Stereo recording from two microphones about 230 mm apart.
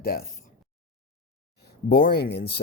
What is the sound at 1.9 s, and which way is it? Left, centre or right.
Speech, left.